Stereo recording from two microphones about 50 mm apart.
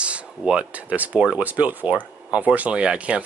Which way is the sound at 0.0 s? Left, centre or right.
Right.